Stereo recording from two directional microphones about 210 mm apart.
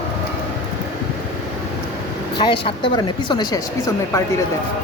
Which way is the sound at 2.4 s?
25° left (ahead or behind).